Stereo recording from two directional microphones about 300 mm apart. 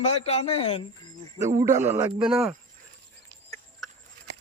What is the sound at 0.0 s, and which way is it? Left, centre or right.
Speech, left.